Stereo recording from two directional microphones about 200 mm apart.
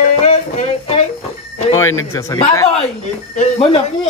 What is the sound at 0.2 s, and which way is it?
Music, 35° left (ahead or behind).